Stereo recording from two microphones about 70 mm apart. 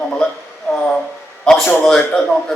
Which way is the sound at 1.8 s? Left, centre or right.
Centre.